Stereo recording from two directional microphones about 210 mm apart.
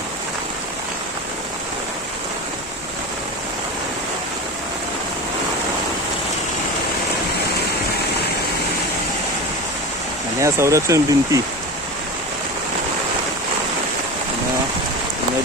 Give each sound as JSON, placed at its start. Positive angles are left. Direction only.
{"t": 10.4, "sound": "speech", "side_deg": -15}